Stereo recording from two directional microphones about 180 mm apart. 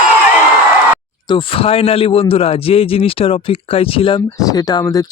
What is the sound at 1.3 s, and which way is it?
A man's voice, 30° left (ahead or behind).